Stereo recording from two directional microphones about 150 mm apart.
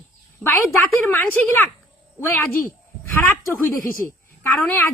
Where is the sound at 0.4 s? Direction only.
10° left (ahead or behind).